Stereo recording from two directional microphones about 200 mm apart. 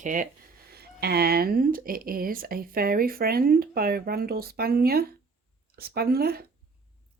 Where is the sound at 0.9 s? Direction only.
50° right (ahead or behind).